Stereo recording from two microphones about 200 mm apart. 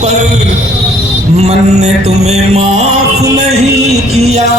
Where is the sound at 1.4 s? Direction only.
35° right (ahead or behind).